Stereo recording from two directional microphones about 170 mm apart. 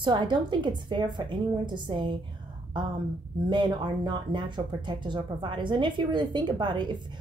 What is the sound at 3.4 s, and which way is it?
Speech, 25° right (ahead or behind).